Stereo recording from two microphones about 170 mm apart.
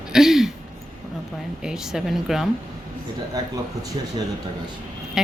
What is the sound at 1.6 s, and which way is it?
Speech, 5° right (ahead or behind).